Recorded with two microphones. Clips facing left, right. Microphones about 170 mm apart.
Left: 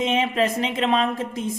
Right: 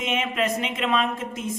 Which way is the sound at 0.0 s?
30° left (ahead or behind).